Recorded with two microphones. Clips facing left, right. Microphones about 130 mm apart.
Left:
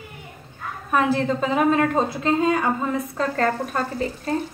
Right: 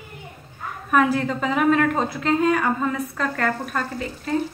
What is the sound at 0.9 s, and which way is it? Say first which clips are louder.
A woman's voice: right 1 dB; 25° left (ahead or behind).